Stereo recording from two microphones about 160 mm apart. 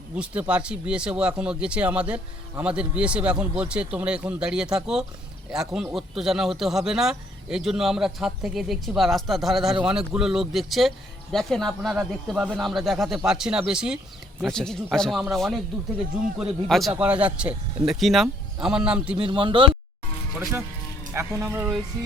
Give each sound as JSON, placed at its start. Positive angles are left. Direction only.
{"t": 0.2, "sound": "speech", "side_deg": -5}
{"t": 19.1, "sound": "speech", "side_deg": -30}
{"t": 21.1, "sound": "speech", "side_deg": -15}
{"t": 22.0, "sound": "music", "side_deg": -20}